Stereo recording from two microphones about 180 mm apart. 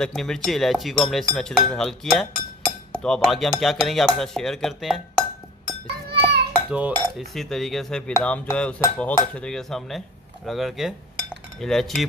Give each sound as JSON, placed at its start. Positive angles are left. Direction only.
{"t": 0.0, "sound": "cutlery", "side_deg": 5}
{"t": 6.0, "sound": "a sound", "side_deg": -65}
{"t": 6.7, "sound": "cutlery", "side_deg": -5}